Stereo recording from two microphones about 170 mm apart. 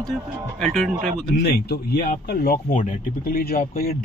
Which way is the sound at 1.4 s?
70° left (ahead or behind).